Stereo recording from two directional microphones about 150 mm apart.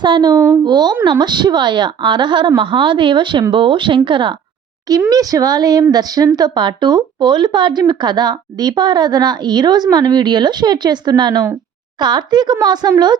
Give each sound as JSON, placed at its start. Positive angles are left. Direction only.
{"t": 0.0, "sound": "a woman's voice", "side_deg": -30}
{"t": 0.3, "sound": "speech", "side_deg": -15}
{"t": 0.6, "sound": "a woman's voice", "side_deg": -30}